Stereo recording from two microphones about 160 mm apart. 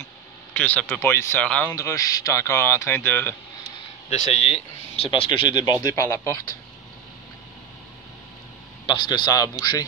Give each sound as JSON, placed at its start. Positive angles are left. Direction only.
{"t": 0.6, "sound": "speech", "side_deg": 10}
{"t": 1.7, "sound": "speech", "side_deg": 20}
{"t": 4.1, "sound": "speech", "side_deg": 45}
{"t": 5.9, "sound": "speech", "side_deg": 15}
{"t": 8.8, "sound": "speech", "side_deg": 30}